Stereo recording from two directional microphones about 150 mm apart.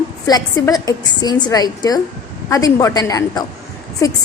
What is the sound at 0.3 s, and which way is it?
A woman's voice, 25° left (ahead or behind).